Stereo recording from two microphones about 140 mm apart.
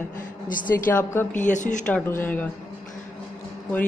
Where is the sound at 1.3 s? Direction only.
65° left (ahead or behind).